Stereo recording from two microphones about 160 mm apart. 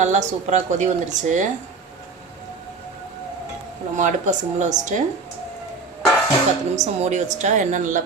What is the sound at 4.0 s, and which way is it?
Speech, 50° right (ahead or behind).